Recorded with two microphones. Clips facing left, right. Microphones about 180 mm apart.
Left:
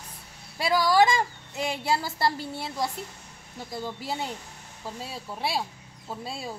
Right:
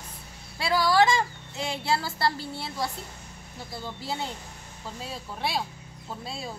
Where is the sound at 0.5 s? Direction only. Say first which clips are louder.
Left 1 dB; 15° left (ahead or behind).